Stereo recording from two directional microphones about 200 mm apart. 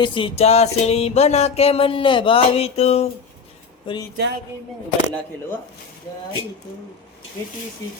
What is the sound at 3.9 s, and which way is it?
Cutlery, 25° left (ahead or behind).